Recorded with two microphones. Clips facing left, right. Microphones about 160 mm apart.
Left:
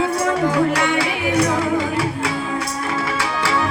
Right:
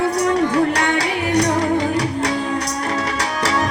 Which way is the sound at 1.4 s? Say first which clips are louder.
Right 1 dB; 40° right (ahead or behind).